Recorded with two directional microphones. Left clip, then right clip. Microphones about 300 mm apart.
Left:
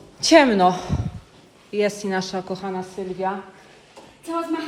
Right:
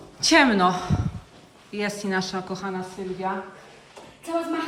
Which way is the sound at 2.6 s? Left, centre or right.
Centre.